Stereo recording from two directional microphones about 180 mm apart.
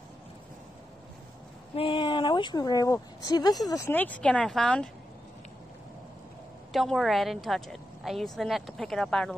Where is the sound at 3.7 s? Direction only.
15° left (ahead or behind).